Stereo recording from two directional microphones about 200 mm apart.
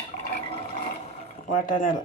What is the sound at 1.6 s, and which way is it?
Speech, 45° left (ahead or behind).